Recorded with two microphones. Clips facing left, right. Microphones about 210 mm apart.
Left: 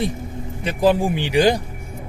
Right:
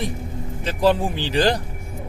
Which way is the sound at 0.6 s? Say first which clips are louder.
Left 2 dB; 15° left (ahead or behind).